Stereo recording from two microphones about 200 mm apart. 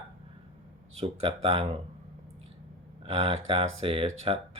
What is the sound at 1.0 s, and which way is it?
Speech, 30° right (ahead or behind).